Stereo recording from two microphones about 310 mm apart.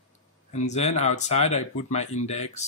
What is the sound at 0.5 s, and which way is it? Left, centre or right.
Speech, left.